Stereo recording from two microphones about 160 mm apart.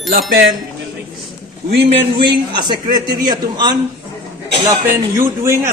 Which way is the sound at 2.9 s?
25° right (ahead or behind).